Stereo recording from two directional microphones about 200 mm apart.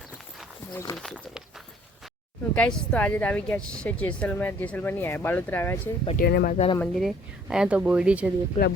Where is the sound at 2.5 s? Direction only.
5° left (ahead or behind).